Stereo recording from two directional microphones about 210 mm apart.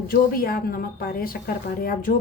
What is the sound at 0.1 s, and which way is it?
A woman's voice, 45° left (ahead or behind).